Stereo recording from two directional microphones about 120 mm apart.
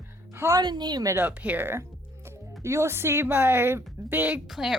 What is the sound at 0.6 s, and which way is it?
Speech, 35° right (ahead or behind).